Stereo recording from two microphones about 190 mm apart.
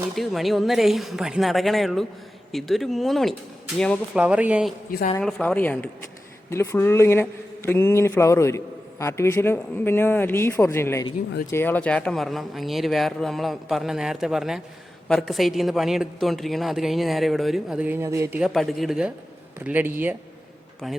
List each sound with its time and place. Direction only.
0.2 s speech: centre (ahead or behind)
4.2 s speech: 5° right (ahead or behind)
4.9 s speech: 50° left (ahead or behind)
5.2 s a man's voice: 5° left (ahead or behind); by 20.1 s 10° right (ahead or behind)